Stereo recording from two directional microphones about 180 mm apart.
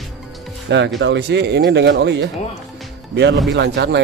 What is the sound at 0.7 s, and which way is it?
Speech, 80° right.